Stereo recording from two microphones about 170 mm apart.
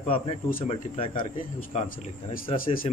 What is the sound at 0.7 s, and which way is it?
Speech, 35° left (ahead or behind).